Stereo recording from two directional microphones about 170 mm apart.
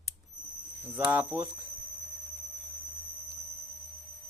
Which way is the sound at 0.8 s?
10° right (ahead or behind).